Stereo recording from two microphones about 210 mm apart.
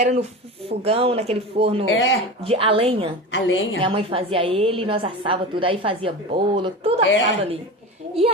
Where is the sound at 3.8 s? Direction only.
25° right (ahead or behind).